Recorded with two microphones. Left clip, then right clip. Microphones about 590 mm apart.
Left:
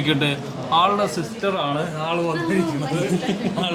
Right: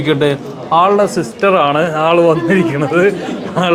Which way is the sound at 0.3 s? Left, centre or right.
Right.